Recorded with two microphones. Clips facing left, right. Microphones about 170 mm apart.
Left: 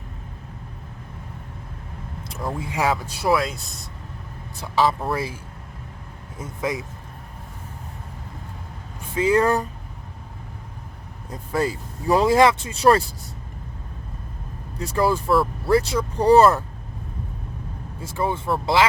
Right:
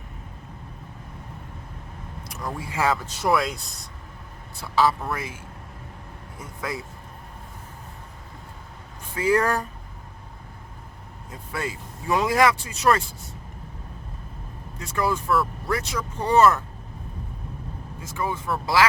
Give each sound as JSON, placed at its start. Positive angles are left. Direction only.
{"t": 2.2, "sound": "speech", "side_deg": 25}
{"t": 4.6, "sound": "speech", "side_deg": 20}
{"t": 5.0, "sound": "speech", "side_deg": 30}
{"t": 6.4, "sound": "speech", "side_deg": 20}
{"t": 9.1, "sound": "speech", "side_deg": 25}
{"t": 11.3, "sound": "speech", "side_deg": 35}
{"t": 14.8, "sound": "speech", "side_deg": 30}
{"t": 18.0, "sound": "speech", "side_deg": 30}